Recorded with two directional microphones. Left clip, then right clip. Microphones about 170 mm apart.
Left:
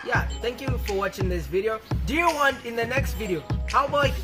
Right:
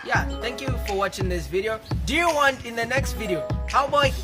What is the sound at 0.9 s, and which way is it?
Music, centre (ahead or behind).